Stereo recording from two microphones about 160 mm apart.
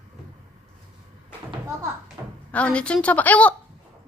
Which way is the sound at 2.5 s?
5° left (ahead or behind).